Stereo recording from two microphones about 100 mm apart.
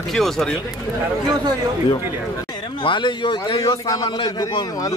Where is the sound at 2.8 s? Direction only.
55° left (ahead or behind).